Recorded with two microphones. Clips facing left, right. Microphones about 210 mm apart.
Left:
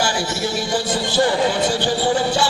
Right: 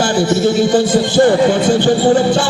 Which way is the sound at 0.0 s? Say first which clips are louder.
Right 9 dB; 55° right (ahead or behind).